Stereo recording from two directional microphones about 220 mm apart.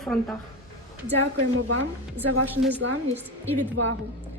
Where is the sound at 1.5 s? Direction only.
65° right (ahead or behind).